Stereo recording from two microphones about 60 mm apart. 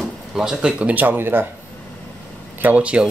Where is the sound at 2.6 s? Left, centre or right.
Right.